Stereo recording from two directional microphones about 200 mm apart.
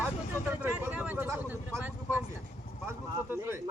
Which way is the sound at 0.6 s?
5° right (ahead or behind).